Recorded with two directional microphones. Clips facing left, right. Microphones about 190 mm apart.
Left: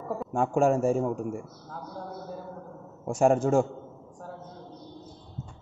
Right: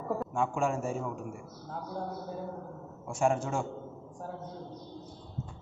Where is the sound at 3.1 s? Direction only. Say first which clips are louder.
Left 7 dB; 40° left (ahead or behind).